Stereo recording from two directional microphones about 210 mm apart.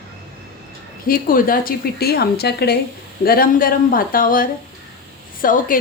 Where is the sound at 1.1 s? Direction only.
40° left (ahead or behind).